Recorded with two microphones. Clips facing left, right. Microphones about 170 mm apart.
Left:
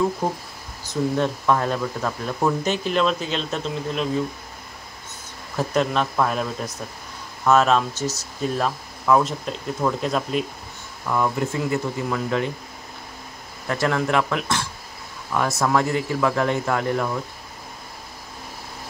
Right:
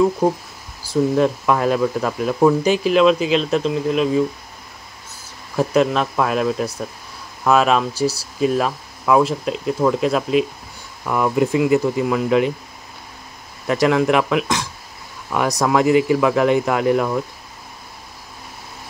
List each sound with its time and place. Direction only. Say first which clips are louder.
0.2 s speech: right 7 dB; 10° right (ahead or behind)
3.2 s speech: right 9 dB; 90° right
3.5 s speech: right 8 dB; 5° right (ahead or behind)
5.6 s speech: right 5 dB; 5° right (ahead or behind)
11.1 s speech: right 5 dB; 15° right (ahead or behind)
13.7 s speech: right 6 dB; 15° right (ahead or behind)